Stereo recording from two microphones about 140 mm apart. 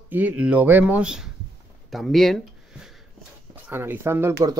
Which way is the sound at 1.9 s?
Centre (ahead or behind).